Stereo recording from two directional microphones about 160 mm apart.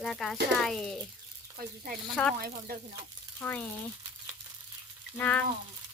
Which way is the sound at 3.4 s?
10° left (ahead or behind).